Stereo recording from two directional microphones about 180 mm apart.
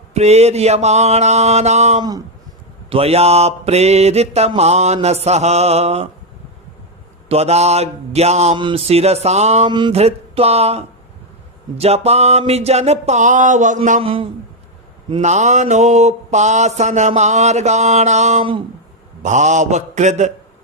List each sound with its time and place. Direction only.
0.1 s mantra: 35° right (ahead or behind)
2.0 s speech: 20° right (ahead or behind)
2.9 s mantra: 35° right (ahead or behind)
7.3 s mantra: 35° right (ahead or behind)
14.0 s mantra: 30° right (ahead or behind)